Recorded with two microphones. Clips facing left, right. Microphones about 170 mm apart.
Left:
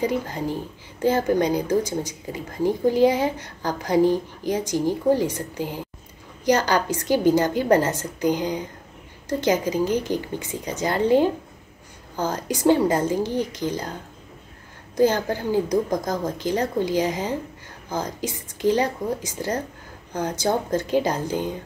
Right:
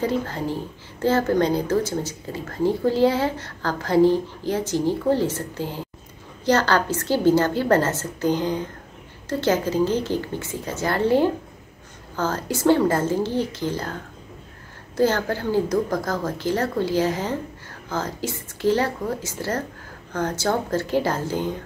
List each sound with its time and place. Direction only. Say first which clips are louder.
0.0 s speech: even; 15° left (ahead or behind)
15.0 s speech: left 1 dB; 15° left (ahead or behind)